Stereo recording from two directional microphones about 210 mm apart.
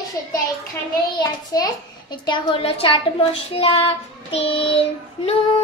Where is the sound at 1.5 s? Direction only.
15° left (ahead or behind).